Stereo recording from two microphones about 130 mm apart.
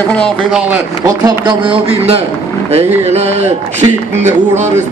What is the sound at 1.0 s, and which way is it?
A man's voice, 35° right (ahead or behind).